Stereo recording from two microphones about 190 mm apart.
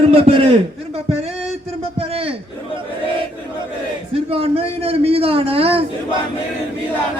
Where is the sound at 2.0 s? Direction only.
30° right (ahead or behind).